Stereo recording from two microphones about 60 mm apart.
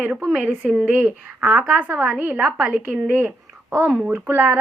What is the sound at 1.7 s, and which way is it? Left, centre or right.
A woman's voice, right.